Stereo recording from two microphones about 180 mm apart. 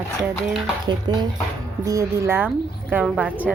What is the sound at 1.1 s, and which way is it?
Speech, 25° right (ahead or behind).